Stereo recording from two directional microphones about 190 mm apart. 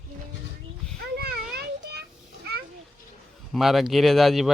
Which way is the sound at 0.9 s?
55° right (ahead or behind).